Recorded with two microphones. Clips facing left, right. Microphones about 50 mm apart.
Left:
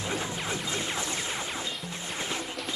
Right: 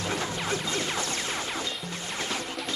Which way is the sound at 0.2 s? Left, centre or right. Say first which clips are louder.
Right 3 dB; centre.